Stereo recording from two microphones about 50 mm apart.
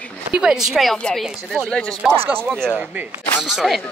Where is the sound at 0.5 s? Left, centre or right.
Centre.